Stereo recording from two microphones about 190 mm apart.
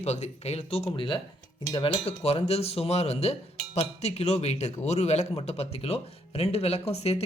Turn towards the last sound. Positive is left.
turn(degrees=35)  # may be behind; listen again after turning